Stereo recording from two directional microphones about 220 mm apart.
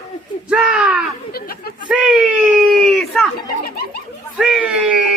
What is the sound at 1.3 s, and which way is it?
Speech, 45° left (ahead or behind).